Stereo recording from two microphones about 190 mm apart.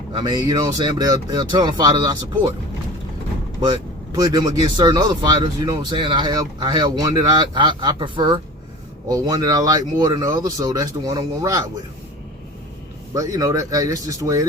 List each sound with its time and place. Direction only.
0.1 s speech: 20° right (ahead or behind)
3.6 s speech: 20° right (ahead or behind)
13.1 s speech: 15° right (ahead or behind)